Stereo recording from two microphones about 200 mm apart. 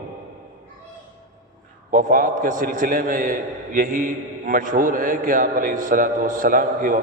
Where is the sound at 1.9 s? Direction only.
45° right (ahead or behind).